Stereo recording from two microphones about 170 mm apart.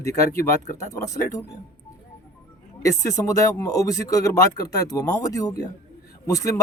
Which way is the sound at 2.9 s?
20° left (ahead or behind).